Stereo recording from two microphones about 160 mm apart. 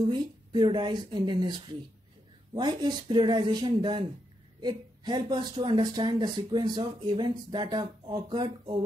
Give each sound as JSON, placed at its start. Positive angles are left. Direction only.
{"t": 0.1, "sound": "speech", "side_deg": -25}
{"t": 2.5, "sound": "speech", "side_deg": -30}